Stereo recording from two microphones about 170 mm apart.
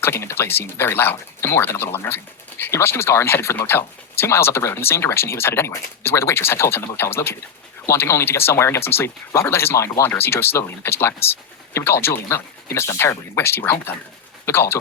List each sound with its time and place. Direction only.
0.0 s speech: 15° left (ahead or behind)